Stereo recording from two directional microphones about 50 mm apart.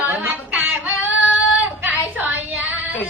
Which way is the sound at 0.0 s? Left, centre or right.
Right.